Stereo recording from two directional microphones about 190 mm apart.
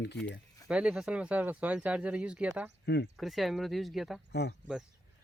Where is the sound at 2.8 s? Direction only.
60° left (ahead or behind).